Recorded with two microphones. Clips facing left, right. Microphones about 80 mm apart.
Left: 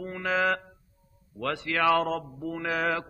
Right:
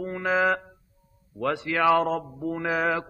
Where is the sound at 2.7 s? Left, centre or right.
Centre.